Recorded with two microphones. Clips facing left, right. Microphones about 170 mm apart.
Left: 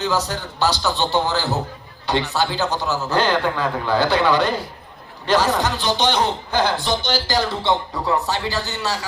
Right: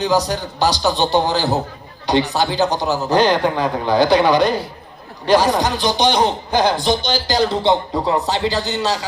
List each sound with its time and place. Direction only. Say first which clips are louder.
0.0 s a man's voice: right 5 dB; 15° right (ahead or behind)